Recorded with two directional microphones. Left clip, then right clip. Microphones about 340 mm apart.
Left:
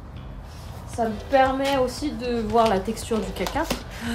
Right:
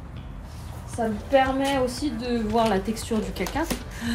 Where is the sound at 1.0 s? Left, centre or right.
Centre.